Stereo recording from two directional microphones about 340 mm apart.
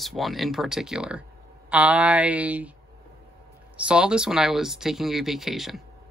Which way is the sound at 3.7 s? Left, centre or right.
Centre.